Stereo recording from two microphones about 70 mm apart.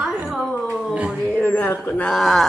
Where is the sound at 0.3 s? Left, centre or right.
Centre.